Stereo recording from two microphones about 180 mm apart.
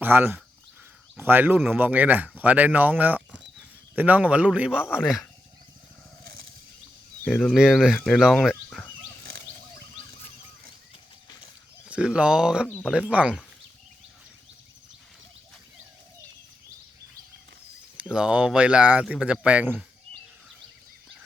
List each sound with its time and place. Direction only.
0.0 s speech: 10° right (ahead or behind)
7.3 s speech: centre (ahead or behind)
11.9 s speech: 5° right (ahead or behind)
17.9 s speech: 5° right (ahead or behind)